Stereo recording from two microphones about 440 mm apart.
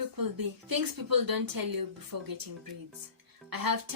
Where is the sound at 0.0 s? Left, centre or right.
Right.